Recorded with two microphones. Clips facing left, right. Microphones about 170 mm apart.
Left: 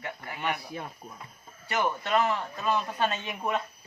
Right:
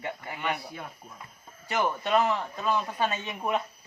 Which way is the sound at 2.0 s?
15° right (ahead or behind).